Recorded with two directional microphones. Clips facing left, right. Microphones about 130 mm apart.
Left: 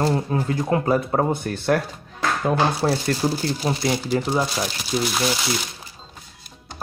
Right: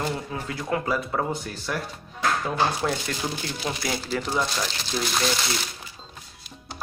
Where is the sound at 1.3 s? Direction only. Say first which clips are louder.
Left 9 dB; 60° left (ahead or behind).